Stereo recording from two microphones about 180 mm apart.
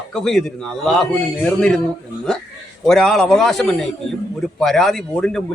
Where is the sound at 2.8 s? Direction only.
Centre (ahead or behind).